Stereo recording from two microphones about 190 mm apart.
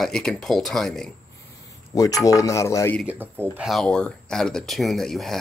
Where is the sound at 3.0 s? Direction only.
10° right (ahead or behind).